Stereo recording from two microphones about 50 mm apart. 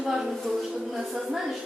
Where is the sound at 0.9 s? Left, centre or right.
Centre.